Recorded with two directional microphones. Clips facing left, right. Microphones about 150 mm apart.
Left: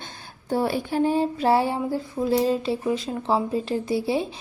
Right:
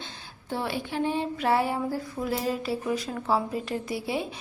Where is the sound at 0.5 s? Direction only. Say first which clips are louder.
Left 7 dB; 40° left (ahead or behind).